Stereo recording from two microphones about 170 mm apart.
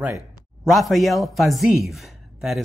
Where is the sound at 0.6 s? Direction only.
Centre (ahead or behind).